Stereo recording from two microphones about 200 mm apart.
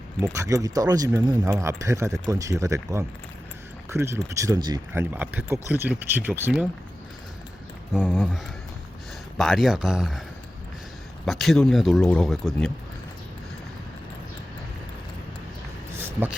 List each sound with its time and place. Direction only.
0.2 s speech: 15° right (ahead or behind)
7.9 s speech: 5° right (ahead or behind)
9.4 s speech: centre (ahead or behind)
11.3 s speech: centre (ahead or behind)
16.0 s a sound: 10° right (ahead or behind)